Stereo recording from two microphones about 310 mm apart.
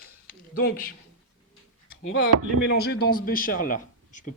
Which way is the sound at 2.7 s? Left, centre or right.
Left.